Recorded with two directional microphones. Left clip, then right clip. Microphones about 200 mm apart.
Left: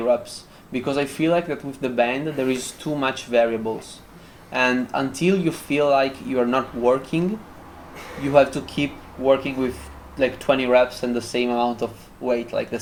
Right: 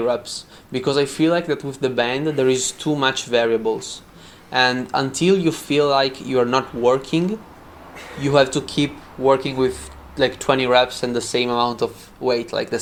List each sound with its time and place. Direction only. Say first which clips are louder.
0.7 s speech: right 4 dB; 35° right (ahead or behind)
8.3 s speech: even; 35° right (ahead or behind)